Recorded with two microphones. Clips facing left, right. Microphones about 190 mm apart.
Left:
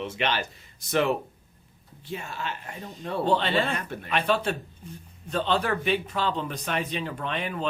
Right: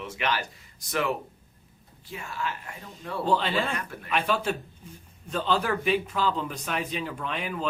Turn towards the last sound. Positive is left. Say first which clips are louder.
# left 1 dB
turn(degrees=-5)  # may be behind; listen again after turning